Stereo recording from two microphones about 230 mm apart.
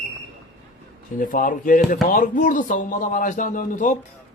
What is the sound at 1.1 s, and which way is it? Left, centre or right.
A man's voice, left.